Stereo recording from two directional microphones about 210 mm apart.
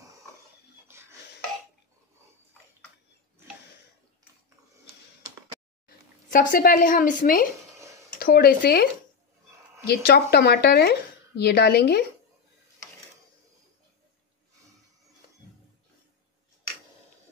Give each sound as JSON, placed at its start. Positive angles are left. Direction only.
{"t": 0.9, "sound": "a sound", "side_deg": -10}
{"t": 6.3, "sound": "a woman's voice", "side_deg": 40}
{"t": 9.8, "sound": "speech", "side_deg": 50}